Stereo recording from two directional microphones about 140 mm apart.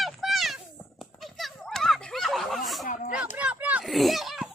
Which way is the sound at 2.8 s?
70° left (ahead or behind).